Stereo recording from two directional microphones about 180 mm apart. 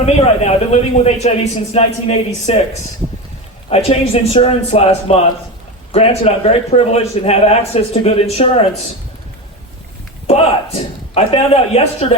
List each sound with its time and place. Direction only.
0.0 s a man's voice: 35° left (ahead or behind)
3.7 s a man's voice: 35° left (ahead or behind)
10.2 s a man's voice: 35° left (ahead or behind)